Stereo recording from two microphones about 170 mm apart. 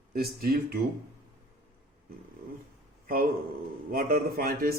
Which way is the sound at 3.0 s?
60° right (ahead or behind).